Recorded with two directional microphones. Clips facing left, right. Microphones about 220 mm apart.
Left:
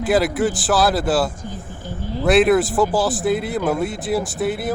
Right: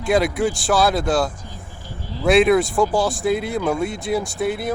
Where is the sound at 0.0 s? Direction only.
5° left (ahead or behind).